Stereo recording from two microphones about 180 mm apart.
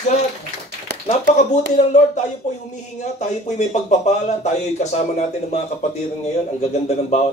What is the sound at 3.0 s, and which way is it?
Speech, 40° left (ahead or behind).